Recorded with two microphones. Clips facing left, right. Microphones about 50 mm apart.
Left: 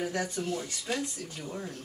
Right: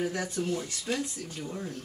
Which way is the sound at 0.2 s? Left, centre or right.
Centre.